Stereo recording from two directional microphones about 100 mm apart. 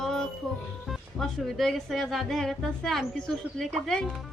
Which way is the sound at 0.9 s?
Centre (ahead or behind).